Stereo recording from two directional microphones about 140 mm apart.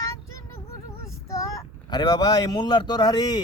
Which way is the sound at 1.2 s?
20° left (ahead or behind).